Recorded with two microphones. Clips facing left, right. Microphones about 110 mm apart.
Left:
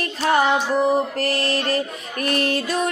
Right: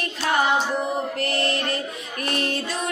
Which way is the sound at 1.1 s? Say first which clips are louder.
Left 2 dB; 40° left (ahead or behind).